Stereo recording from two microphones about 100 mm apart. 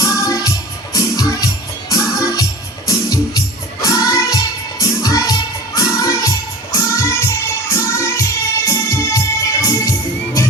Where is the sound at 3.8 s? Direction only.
35° left (ahead or behind).